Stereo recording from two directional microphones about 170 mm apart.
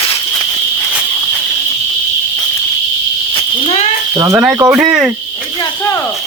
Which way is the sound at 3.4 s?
35° left (ahead or behind).